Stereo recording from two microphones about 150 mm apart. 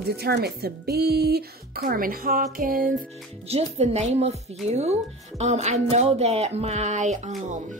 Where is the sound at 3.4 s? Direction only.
45° right (ahead or behind).